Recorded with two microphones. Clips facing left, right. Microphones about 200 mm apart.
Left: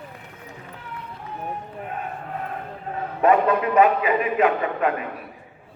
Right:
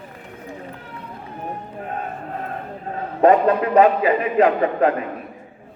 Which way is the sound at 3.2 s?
35° right (ahead or behind).